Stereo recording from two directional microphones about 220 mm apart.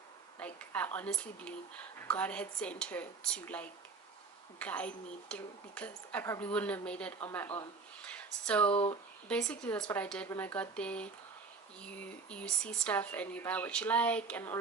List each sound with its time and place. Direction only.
0.3 s speech: 5° left (ahead or behind)
8.7 s speech: 25° left (ahead or behind)
9.3 s speech: 5° left (ahead or behind)